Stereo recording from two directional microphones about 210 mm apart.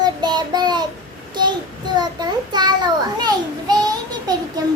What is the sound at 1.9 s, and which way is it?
Child singing, 20° right (ahead or behind).